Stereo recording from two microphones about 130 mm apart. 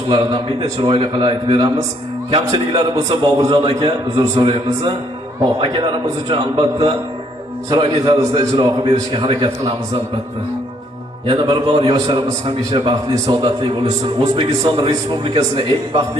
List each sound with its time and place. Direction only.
0.8 s a man's voice: 40° right (ahead or behind)
11.3 s a man's voice: 35° right (ahead or behind)